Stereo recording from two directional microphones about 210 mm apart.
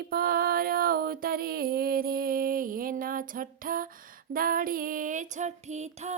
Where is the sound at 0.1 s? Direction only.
45° right (ahead or behind).